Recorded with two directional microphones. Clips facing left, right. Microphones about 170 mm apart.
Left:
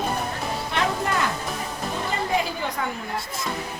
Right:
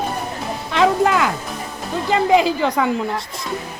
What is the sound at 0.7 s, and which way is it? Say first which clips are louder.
Music: right 10 dB; 90° right.